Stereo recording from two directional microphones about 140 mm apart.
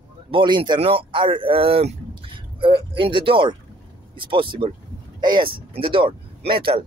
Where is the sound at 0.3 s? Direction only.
35° right (ahead or behind).